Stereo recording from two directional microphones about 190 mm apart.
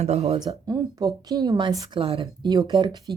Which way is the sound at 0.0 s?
35° right (ahead or behind).